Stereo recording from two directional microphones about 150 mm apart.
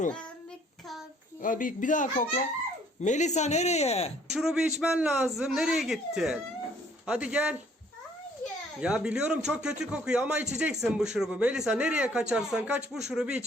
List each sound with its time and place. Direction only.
1.4 s speech: 65° left (ahead or behind); by 4.1 s 45° left (ahead or behind)
4.3 s speech: 5° right (ahead or behind)
8.8 s speech: 5° right (ahead or behind)